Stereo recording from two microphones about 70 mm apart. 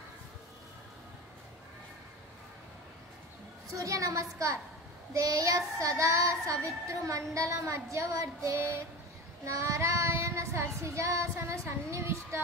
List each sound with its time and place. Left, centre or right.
3.7 s child singing: right